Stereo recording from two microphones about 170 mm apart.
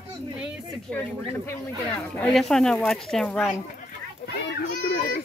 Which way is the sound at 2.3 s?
Centre (ahead or behind).